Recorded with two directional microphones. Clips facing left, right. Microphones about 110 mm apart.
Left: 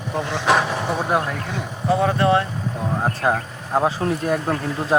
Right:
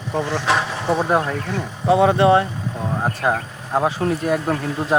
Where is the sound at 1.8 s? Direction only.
20° right (ahead or behind).